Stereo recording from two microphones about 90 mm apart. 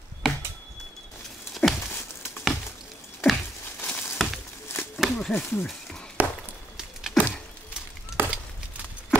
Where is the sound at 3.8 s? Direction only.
25° left (ahead or behind).